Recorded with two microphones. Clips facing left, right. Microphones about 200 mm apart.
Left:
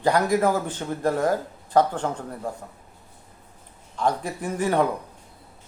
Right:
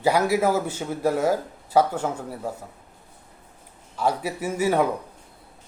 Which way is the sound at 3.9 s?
10° right (ahead or behind).